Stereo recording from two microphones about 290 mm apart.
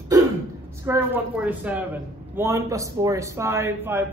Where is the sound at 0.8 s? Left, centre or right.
Centre.